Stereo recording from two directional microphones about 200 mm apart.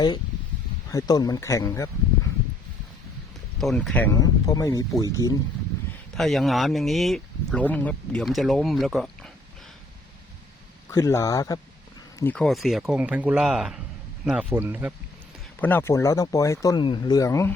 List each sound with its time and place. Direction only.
0.9 s speech: 15° left (ahead or behind)
3.6 s speech: centre (ahead or behind); by 5.4 s 15° left (ahead or behind)
6.1 s speech: centre (ahead or behind)
10.9 s speech: 15° left (ahead or behind)
12.2 s speech: 5° left (ahead or behind)
15.6 s speech: 10° left (ahead or behind)